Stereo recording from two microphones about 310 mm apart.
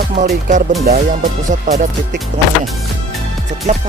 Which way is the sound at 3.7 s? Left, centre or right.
Right.